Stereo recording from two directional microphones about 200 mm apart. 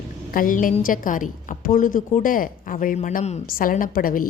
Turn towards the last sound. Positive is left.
turn(degrees=45)  # may be behind; listen again after turning